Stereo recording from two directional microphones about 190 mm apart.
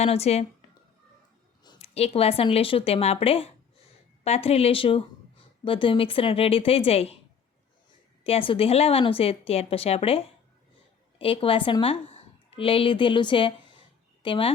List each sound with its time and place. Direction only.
0.0 s speech: 35° left (ahead or behind)
1.6 s a woman's voice: 30° left (ahead or behind)
8.2 s a woman's voice: 30° left (ahead or behind)